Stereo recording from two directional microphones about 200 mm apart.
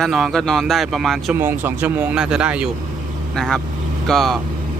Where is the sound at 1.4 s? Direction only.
10° right (ahead or behind).